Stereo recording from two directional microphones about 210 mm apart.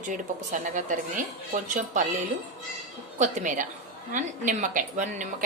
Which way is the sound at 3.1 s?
35° right (ahead or behind).